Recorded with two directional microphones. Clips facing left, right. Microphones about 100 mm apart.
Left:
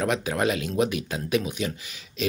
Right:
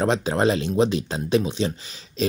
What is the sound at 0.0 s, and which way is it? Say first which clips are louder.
Speech: right 4 dB; 30° right (ahead or behind).